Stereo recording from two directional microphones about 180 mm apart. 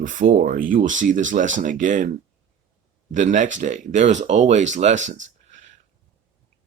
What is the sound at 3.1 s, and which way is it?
Speech, 45° right (ahead or behind).